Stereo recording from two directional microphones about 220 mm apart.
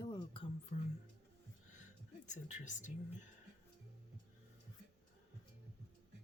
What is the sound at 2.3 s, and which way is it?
Speech, 35° left (ahead or behind).